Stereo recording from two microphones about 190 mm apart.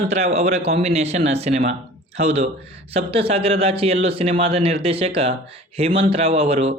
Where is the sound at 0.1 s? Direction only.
35° right (ahead or behind).